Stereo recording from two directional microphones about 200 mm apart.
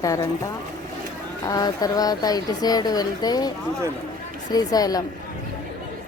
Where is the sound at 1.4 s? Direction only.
20° left (ahead or behind).